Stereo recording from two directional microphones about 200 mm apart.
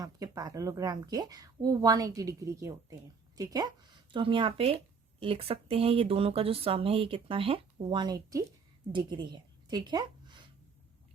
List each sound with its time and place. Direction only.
0.0 s a woman's voice: 20° right (ahead or behind)